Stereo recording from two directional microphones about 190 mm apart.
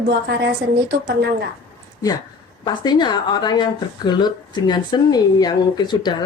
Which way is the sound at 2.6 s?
20° left (ahead or behind).